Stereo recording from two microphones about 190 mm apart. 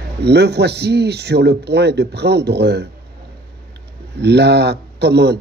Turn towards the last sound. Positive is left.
turn(degrees=-60)  # may be behind; listen again after turning